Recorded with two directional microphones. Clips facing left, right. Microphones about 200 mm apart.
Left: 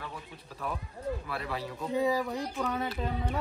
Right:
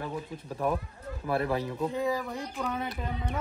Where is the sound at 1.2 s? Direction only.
45° right (ahead or behind).